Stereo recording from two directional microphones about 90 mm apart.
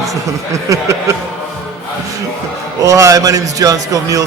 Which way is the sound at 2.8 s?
35° right (ahead or behind).